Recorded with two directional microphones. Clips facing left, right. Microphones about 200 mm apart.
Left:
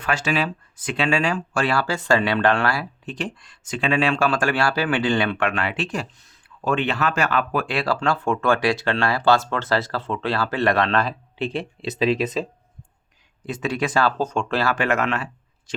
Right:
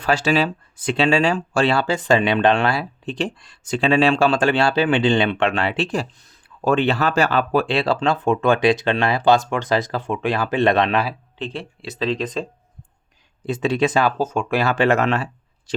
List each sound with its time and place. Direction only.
0.0 s speech: 35° right (ahead or behind); by 11.1 s 15° right (ahead or behind)
11.3 s speech: 15° left (ahead or behind)
13.4 s speech: 25° right (ahead or behind)
14.2 s speech: 5° right (ahead or behind)
14.6 s speech: 25° right (ahead or behind)